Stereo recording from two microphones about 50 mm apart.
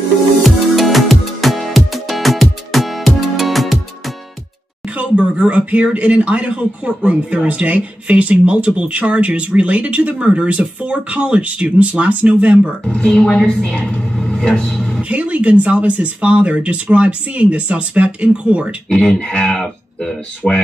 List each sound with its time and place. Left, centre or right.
0.4 s music: centre
4.8 s speech: right
12.8 s a woman's voice: centre
15.0 s speech: right
18.9 s speech: centre